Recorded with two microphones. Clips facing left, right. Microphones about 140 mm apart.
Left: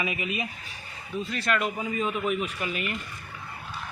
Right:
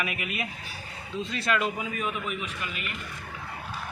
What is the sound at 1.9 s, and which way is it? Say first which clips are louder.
A man's voice: left 4 dB; 30° left (ahead or behind).